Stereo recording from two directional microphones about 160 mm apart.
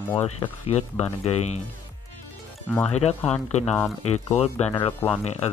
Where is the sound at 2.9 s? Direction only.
40° left (ahead or behind).